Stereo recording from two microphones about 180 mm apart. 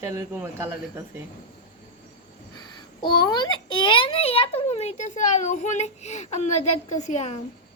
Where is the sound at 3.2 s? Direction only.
25° left (ahead or behind).